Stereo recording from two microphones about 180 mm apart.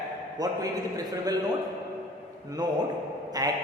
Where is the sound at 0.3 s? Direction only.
20° right (ahead or behind).